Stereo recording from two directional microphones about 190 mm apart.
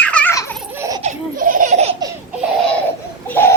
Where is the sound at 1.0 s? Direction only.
40° right (ahead or behind).